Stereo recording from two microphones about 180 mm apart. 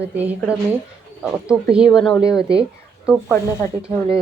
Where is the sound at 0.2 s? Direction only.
10° right (ahead or behind).